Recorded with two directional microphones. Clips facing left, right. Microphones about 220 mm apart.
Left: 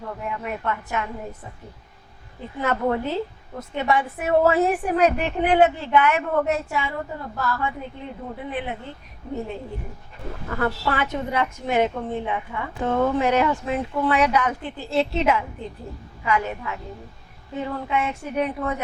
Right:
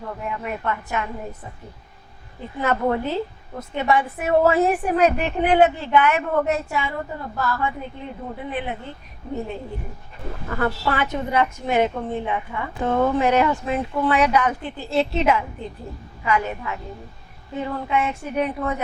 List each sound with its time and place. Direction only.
0.0 s a woman's voice: 20° right (ahead or behind)
2.6 s a woman's voice: 15° right (ahead or behind)
10.3 s a woman's voice: 25° right (ahead or behind)